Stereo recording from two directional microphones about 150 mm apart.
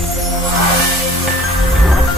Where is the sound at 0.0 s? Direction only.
Centre (ahead or behind).